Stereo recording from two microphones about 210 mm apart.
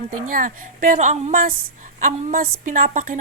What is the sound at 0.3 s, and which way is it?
A woman's voice, 40° right (ahead or behind).